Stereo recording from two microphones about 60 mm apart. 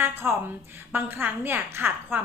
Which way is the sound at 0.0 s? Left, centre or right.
Right.